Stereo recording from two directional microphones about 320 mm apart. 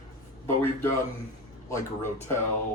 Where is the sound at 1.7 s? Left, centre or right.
Centre.